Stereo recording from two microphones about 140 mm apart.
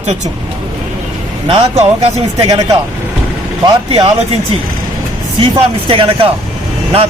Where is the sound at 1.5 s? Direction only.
45° right (ahead or behind).